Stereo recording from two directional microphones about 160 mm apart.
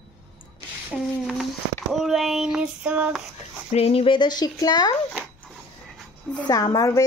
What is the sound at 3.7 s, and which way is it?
Speech, 40° left (ahead or behind).